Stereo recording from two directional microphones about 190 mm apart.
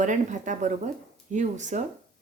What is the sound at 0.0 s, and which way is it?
Speech, 40° right (ahead or behind).